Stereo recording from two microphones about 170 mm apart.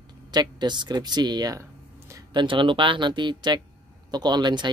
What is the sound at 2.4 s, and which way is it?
Speech, 30° right (ahead or behind).